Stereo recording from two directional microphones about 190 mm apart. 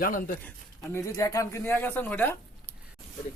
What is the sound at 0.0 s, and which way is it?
Speech, 45° left (ahead or behind).